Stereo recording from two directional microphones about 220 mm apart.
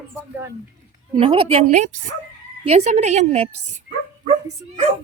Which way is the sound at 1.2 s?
25° right (ahead or behind).